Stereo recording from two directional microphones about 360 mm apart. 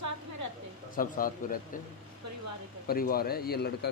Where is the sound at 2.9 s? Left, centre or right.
Left.